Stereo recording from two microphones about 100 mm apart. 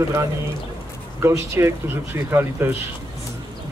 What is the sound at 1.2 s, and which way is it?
Speech, 25° right (ahead or behind).